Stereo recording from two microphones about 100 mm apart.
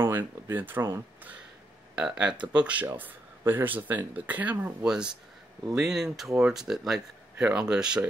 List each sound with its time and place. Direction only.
0.0 s speech: 20° right (ahead or behind)
2.0 s speech: 5° right (ahead or behind)